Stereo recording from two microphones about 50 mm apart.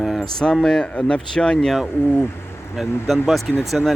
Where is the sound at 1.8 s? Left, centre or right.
Left.